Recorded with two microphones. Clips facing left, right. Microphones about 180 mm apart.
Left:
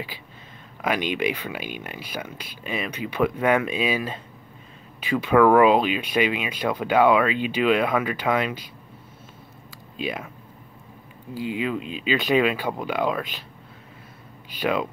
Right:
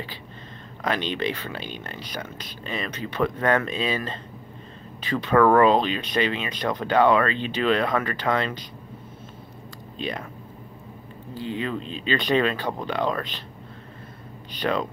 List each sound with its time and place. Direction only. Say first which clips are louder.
0.8 s speech: left 2 dB; 10° left (ahead or behind)
9.9 s speech: left 1 dB; 5° left (ahead or behind)
11.3 s speech: left 2 dB; 10° left (ahead or behind)
14.5 s speech: left 1 dB; 5° left (ahead or behind)